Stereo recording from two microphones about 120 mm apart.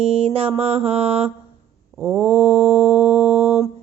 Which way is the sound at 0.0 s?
55° right (ahead or behind).